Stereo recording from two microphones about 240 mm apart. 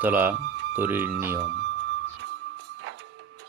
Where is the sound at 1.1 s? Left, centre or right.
Right.